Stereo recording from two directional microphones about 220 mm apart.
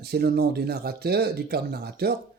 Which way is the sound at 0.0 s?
45° right (ahead or behind).